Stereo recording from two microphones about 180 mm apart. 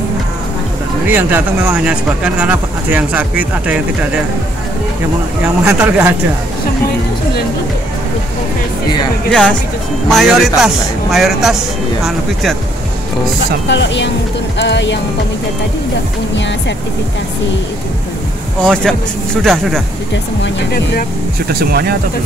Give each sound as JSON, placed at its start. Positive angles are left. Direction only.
{"t": 1.0, "sound": "speech", "side_deg": -10}
{"t": 5.6, "sound": "speech", "side_deg": -10}
{"t": 9.3, "sound": "speech", "side_deg": 5}
{"t": 13.7, "sound": "speech", "side_deg": 75}
{"t": 18.6, "sound": "speech", "side_deg": 5}
{"t": 20.4, "sound": "speech", "side_deg": 65}
{"t": 21.5, "sound": "speech", "side_deg": -60}